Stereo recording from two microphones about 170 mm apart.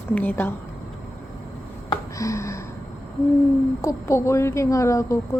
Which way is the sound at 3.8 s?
15° left (ahead or behind).